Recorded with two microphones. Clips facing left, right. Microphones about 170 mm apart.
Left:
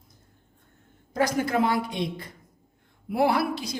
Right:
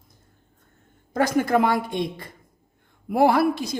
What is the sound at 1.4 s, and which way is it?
Speech, 55° right (ahead or behind).